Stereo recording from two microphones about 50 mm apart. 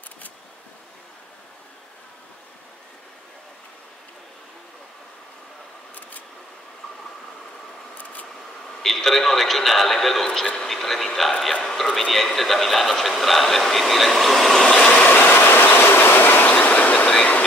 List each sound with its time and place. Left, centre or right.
8.0 s a sound: left
8.8 s speech: centre
10.4 s vehicle: centre
10.7 s speech: centre
14.7 s vehicle: centre
15.0 s train: left